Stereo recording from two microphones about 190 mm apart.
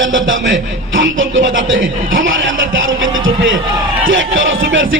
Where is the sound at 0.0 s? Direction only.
85° right.